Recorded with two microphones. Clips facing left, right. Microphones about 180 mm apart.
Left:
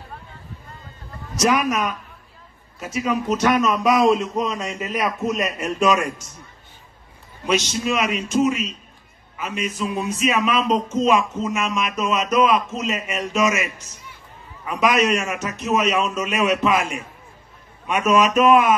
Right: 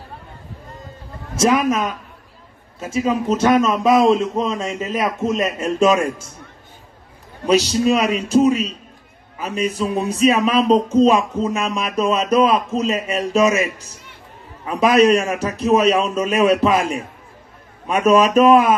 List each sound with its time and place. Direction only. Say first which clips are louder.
1.3 s a man's voice: right 3 dB; 25° right (ahead or behind)
7.4 s speech: right 6 dB; 35° right (ahead or behind)